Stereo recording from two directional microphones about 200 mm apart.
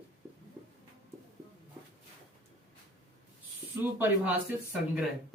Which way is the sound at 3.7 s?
10° right (ahead or behind).